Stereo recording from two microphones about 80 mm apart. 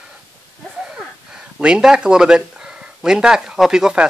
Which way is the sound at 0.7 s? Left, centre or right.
Centre.